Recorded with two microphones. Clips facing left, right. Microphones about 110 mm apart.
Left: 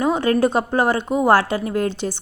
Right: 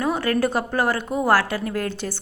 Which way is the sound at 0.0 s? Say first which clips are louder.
Left 4 dB; 20° left (ahead or behind).